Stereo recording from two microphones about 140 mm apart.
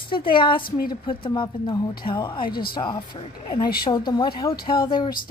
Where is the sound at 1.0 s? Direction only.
35° left (ahead or behind).